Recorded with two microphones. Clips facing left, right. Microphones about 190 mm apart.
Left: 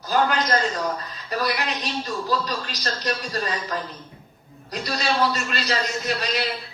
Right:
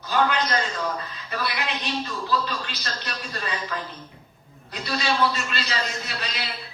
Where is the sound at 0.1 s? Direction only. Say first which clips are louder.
Left 2 dB; 40° left (ahead or behind).